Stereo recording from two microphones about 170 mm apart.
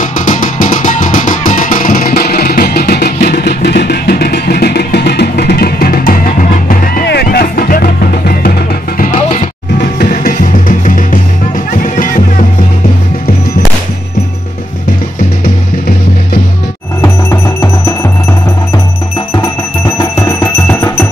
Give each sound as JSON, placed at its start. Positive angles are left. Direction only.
{"t": 0.0, "sound": "music", "side_deg": 50}
{"t": 9.8, "sound": "music", "side_deg": 60}
{"t": 17.0, "sound": "music", "side_deg": 15}
{"t": 20.0, "sound": "music", "side_deg": 20}